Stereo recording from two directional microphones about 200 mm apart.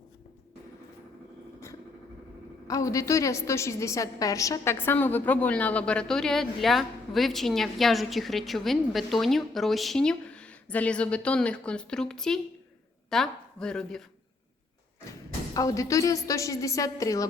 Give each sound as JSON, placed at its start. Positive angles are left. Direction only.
{"t": 2.6, "sound": "a woman's voice", "side_deg": 15}
{"t": 15.5, "sound": "a woman's voice", "side_deg": 15}